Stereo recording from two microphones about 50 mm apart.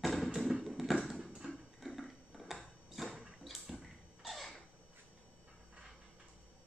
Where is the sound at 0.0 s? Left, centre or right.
Centre.